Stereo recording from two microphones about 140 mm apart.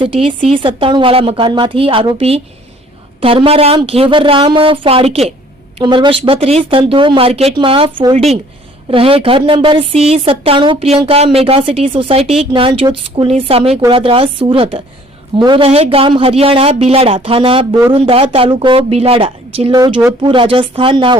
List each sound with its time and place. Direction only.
0.0 s a woman's voice: 40° right (ahead or behind)
5.8 s a woman's voice: 35° right (ahead or behind)
15.6 s speech: 45° right (ahead or behind)
19.7 s a woman's voice: 30° right (ahead or behind)